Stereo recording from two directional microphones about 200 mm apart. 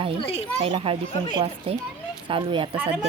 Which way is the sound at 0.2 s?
30° left (ahead or behind).